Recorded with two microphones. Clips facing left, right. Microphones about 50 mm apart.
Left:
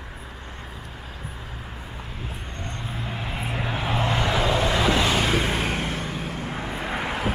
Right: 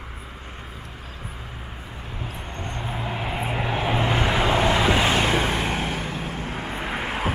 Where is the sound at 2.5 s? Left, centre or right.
Right.